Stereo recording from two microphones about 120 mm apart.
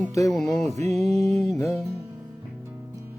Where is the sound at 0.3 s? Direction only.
5° left (ahead or behind).